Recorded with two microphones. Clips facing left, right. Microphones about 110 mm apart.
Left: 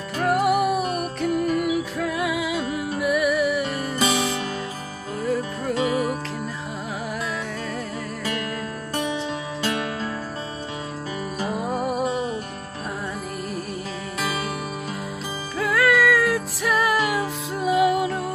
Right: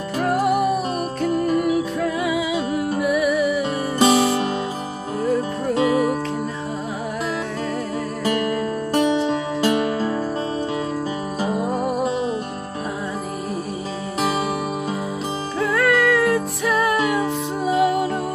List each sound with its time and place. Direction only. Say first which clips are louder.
0.2 s music: right 1 dB; 5° left (ahead or behind)
4.0 s music: right 8 dB; 35° right (ahead or behind)
5.2 s music: right 4 dB; centre (ahead or behind)
5.8 s music: right 5 dB; 40° right (ahead or behind)
8.9 s music: right 8 dB; 30° right (ahead or behind)
11.6 s music: even; centre (ahead or behind)
15.6 s music: right 1 dB; centre (ahead or behind)